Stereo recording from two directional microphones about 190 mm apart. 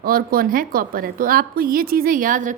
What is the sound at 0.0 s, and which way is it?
Speech, 50° right (ahead or behind).